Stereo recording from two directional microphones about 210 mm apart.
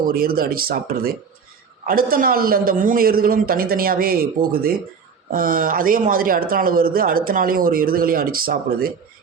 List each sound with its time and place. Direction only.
0.1 s speech: 45° right (ahead or behind)